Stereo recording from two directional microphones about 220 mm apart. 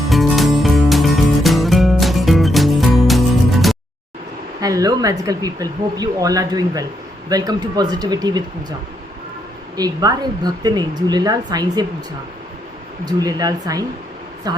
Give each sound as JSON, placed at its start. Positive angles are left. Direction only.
{"t": 0.1, "sound": "music", "side_deg": 0}
{"t": 4.6, "sound": "speech", "side_deg": -15}
{"t": 9.7, "sound": "speech", "side_deg": -15}
{"t": 13.1, "sound": "speech", "side_deg": -15}